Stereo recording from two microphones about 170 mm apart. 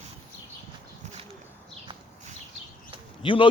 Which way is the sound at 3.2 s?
30° left (ahead or behind).